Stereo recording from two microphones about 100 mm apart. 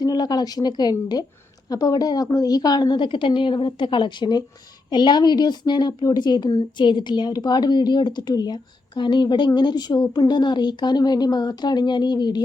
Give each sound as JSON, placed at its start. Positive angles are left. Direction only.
{"t": 0.0, "sound": "a woman's voice", "side_deg": 40}